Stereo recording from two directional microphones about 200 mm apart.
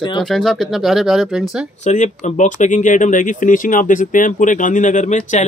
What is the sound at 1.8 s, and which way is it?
Speech, 35° left (ahead or behind).